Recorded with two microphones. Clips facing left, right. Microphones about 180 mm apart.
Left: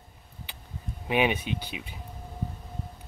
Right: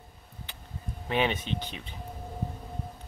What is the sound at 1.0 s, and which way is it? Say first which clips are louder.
Speech: left 2 dB; 15° left (ahead or behind).